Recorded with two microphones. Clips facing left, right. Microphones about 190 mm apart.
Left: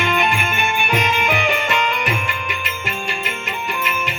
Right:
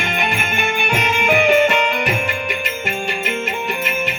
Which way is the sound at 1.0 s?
55° right (ahead or behind).